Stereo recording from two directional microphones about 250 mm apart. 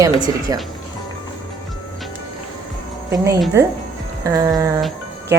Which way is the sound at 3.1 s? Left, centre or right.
Centre.